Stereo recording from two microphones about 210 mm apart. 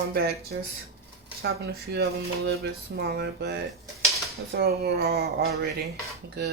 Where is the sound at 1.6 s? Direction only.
50° right (ahead or behind).